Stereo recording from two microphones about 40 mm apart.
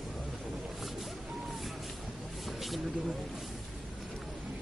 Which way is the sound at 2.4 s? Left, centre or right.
Centre.